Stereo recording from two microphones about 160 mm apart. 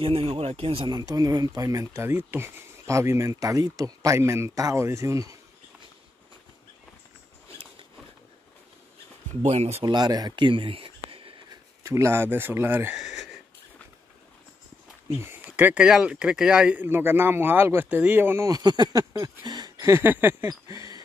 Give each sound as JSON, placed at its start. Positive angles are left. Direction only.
{"t": 0.0, "sound": "speech", "side_deg": -35}
{"t": 9.4, "sound": "speech", "side_deg": -40}
{"t": 9.8, "sound": "speech", "side_deg": -25}
{"t": 11.8, "sound": "speech", "side_deg": -20}
{"t": 15.1, "sound": "speech", "side_deg": -15}
{"t": 19.4, "sound": "a sound", "side_deg": -25}